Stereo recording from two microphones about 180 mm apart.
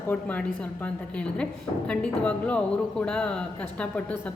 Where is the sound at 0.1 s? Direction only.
10° left (ahead or behind).